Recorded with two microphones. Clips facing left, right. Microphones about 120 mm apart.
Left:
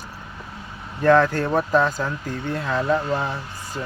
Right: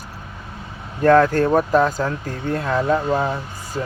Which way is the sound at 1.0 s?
45° right (ahead or behind).